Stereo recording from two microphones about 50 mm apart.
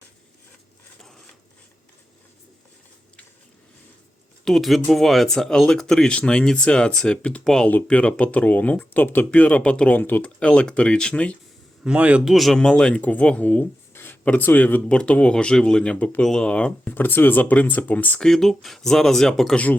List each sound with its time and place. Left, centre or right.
4.4 s speech: centre; by 7.4 s left
7.4 s speech: centre
7.9 s speech: left
9.9 s speech: left
10.2 s speech: left
11.9 s a man's voice: right
12.2 s speech: centre
12.5 s speech: centre
13.0 s speech: left
13.9 s a sound: left
14.3 s speech: left
14.8 s speech: left
16.9 s speech: left
18.2 s speech: centre